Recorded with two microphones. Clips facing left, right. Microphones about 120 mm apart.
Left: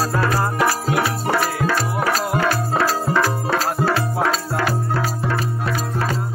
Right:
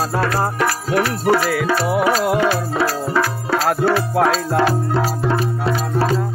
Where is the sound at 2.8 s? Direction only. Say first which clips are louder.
Even; 5° right (ahead or behind).